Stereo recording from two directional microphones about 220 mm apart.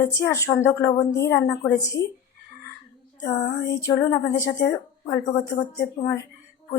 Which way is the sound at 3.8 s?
10° left (ahead or behind).